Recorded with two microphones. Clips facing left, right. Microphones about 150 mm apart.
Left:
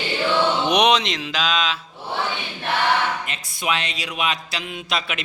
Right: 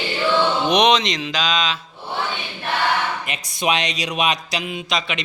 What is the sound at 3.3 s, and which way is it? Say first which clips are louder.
A man's voice: right 4 dB; 15° right (ahead or behind).